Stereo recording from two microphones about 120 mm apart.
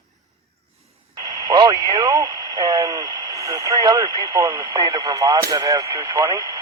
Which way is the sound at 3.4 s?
30° right (ahead or behind).